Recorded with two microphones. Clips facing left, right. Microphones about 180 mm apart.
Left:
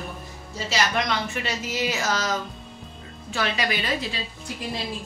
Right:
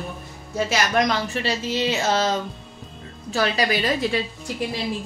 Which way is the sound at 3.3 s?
35° right (ahead or behind).